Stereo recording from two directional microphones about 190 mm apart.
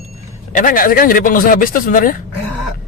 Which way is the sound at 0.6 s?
45° left (ahead or behind).